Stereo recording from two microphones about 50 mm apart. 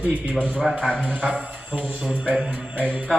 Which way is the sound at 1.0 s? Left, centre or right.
Right.